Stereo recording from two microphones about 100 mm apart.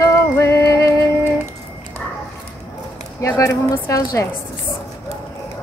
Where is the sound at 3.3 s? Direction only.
30° left (ahead or behind).